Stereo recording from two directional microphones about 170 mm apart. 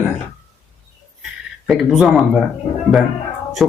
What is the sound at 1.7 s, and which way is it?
Speech, centre (ahead or behind).